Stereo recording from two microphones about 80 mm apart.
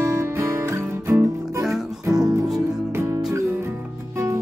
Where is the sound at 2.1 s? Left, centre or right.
Right.